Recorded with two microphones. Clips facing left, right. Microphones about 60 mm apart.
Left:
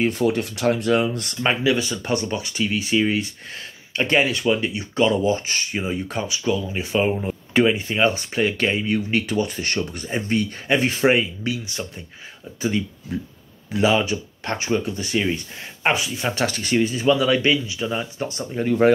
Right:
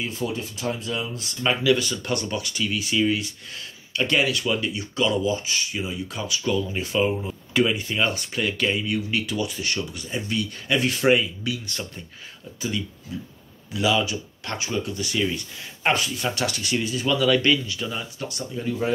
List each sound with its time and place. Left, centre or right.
0.0 s speech: left
1.4 s speech: left
6.4 s speech: centre; by 11.5 s left
11.6 s speech: centre
13.7 s speech: left
15.8 s speech: centre
16.3 s speech: left
17.0 s speech: left
18.6 s speech: left